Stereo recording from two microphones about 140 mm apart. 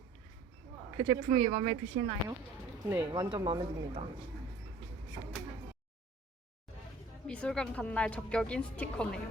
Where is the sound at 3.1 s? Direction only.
25° right (ahead or behind).